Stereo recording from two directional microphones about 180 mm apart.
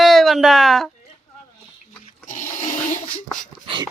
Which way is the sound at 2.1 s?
40° left (ahead or behind).